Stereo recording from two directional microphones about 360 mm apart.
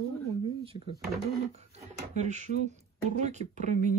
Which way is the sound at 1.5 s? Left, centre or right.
Centre.